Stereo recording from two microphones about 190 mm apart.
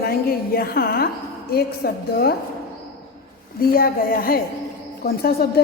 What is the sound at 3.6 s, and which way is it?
A woman's voice, 50° left (ahead or behind).